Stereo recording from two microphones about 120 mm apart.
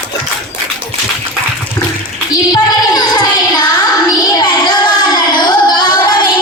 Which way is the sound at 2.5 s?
35° left (ahead or behind).